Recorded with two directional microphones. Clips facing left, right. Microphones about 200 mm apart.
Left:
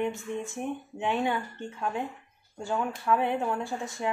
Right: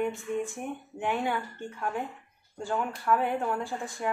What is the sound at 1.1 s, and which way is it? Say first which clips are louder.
A woman's voice: left 2 dB; 20° left (ahead or behind).